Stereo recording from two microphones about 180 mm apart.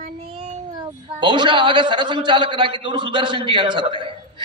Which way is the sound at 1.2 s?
25° right (ahead or behind).